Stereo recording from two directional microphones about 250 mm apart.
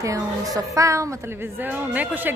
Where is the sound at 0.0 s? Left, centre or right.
Centre.